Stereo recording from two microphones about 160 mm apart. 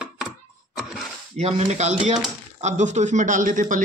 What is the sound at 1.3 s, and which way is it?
A man's voice, 45° right (ahead or behind).